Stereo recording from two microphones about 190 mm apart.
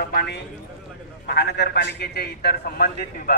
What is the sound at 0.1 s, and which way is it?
A man's voice, 55° left (ahead or behind).